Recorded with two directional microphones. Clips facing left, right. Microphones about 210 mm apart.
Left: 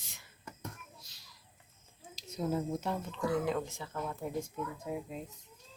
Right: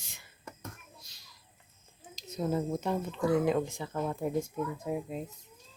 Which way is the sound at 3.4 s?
15° right (ahead or behind).